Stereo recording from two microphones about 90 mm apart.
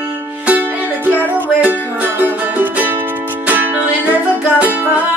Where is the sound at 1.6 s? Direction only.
20° right (ahead or behind).